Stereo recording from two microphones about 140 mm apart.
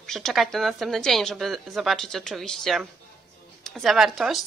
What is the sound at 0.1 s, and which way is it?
Speech, centre (ahead or behind).